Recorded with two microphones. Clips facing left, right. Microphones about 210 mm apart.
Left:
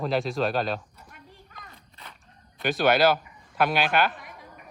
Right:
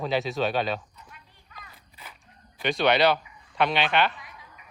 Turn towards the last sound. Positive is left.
turn(degrees=50)  # may be behind; listen again after turning